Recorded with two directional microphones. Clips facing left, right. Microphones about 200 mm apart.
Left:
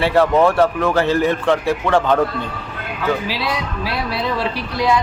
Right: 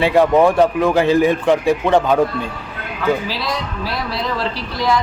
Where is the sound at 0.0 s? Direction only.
15° right (ahead or behind).